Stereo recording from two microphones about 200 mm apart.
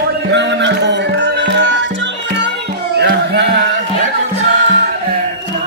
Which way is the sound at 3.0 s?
55° right (ahead or behind).